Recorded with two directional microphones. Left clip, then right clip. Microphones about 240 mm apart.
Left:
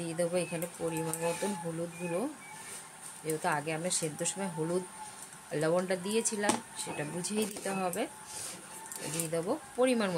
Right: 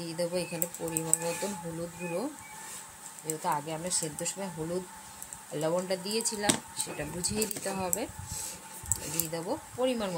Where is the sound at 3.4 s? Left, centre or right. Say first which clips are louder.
Right 1 dB; centre.